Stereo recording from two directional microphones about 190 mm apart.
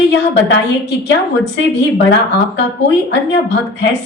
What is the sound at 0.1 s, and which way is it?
Speech, 65° left (ahead or behind).